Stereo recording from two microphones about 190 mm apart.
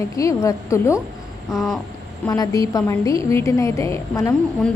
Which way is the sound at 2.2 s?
15° left (ahead or behind).